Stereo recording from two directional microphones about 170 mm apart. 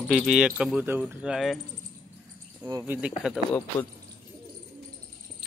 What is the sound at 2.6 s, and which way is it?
Speech, 15° right (ahead or behind).